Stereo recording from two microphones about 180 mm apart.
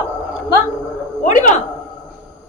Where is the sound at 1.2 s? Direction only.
45° left (ahead or behind).